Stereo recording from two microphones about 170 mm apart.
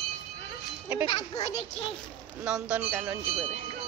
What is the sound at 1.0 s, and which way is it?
Speech, 25° left (ahead or behind).